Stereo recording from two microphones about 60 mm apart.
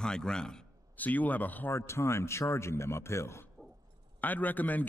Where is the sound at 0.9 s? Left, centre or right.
Left.